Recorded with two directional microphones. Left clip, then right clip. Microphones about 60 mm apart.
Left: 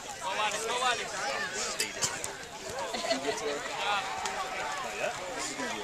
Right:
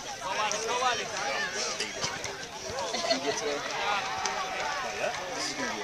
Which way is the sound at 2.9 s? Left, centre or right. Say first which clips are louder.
Right 2 dB; right.